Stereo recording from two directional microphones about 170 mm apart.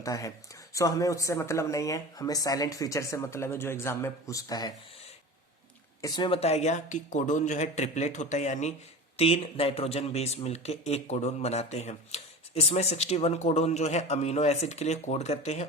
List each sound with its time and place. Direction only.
0.0 s speech: 20° left (ahead or behind)
6.0 s a man's voice: 25° left (ahead or behind); by 15.6 s 40° left (ahead or behind)